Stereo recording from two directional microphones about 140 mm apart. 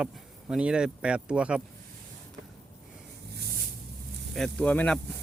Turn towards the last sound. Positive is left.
turn(degrees=5)  # may be behind; listen again after turning